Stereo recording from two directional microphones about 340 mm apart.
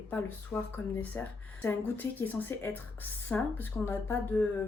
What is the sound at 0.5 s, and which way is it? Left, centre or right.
Speech, centre.